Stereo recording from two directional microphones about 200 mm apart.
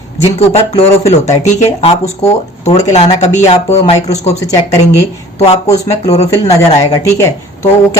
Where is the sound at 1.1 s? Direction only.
35° left (ahead or behind).